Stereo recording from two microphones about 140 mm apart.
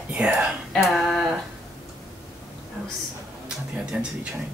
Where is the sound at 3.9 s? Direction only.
10° right (ahead or behind).